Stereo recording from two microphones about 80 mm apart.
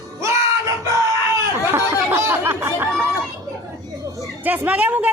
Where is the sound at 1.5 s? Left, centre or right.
Right.